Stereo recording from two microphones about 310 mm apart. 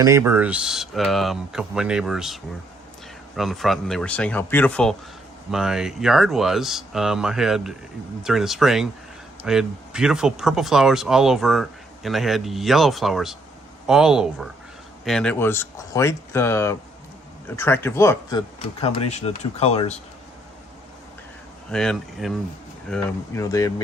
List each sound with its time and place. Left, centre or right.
0.0 s speech: centre
21.7 s speech: centre